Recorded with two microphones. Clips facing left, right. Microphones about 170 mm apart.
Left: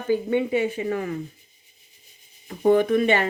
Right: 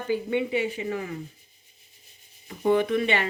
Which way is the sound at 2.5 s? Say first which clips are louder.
Left 4 dB; 45° left (ahead or behind).